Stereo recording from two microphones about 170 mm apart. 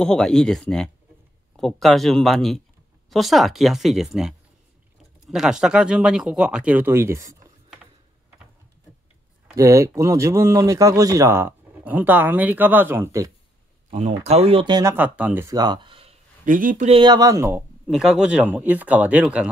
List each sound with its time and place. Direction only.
0.0 s speech: 5° left (ahead or behind); by 7.3 s 15° right (ahead or behind)
9.6 s speech: 20° right (ahead or behind)
13.8 s speech: 40° right (ahead or behind)
16.4 s speech: 50° right (ahead or behind)
17.0 s speech: 20° right (ahead or behind)
17.6 s speech: centre (ahead or behind)